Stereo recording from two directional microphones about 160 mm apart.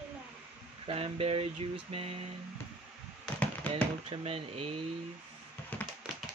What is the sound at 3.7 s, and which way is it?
Speech, 40° right (ahead or behind).